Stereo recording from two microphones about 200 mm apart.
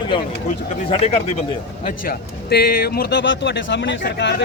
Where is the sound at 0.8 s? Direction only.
30° left (ahead or behind).